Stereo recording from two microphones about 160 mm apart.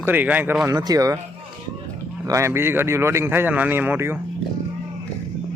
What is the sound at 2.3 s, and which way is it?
A man's voice, 15° right (ahead or behind).